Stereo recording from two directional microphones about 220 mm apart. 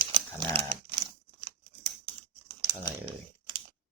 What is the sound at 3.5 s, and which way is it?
Typing, 20° right (ahead or behind).